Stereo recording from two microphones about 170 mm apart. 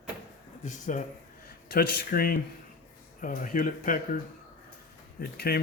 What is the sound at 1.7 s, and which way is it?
Speech, 60° left (ahead or behind).